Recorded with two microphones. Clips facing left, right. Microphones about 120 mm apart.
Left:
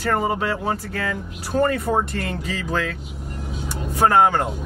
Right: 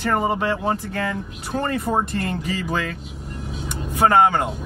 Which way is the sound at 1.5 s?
10° right (ahead or behind).